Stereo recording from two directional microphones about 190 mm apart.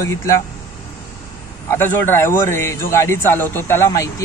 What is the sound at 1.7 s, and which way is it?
A man's voice, 10° left (ahead or behind).